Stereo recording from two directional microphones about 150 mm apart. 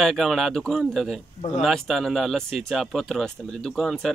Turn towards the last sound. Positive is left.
turn(degrees=0)  # may be behind; listen again after turning